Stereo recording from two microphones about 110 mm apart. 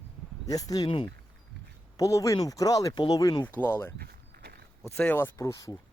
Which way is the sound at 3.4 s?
20° left (ahead or behind).